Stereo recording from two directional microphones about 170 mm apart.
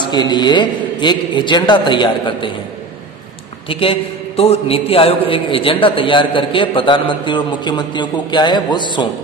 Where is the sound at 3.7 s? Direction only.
30° left (ahead or behind).